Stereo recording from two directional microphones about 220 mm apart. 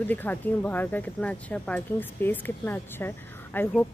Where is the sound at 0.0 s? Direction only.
10° left (ahead or behind).